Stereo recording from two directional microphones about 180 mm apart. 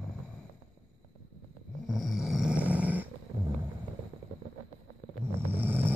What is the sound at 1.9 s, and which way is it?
Snoring, centre (ahead or behind).